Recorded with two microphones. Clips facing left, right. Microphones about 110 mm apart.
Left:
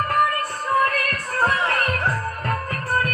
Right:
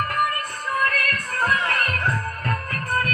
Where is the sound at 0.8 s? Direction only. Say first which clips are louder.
Left 1 dB; 30° left (ahead or behind).